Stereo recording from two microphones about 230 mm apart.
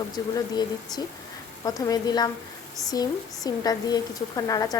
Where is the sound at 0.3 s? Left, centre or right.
Centre.